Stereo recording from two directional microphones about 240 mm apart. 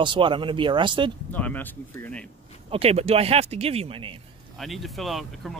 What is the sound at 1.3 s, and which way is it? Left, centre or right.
Speech, centre.